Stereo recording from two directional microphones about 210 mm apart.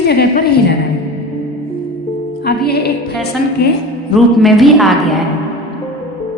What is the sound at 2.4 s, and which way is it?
Music, 50° left (ahead or behind).